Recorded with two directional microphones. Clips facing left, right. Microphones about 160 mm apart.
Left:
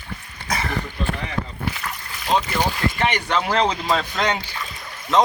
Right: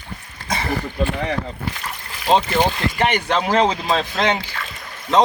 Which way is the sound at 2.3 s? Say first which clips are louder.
Right 4 dB; 30° right (ahead or behind).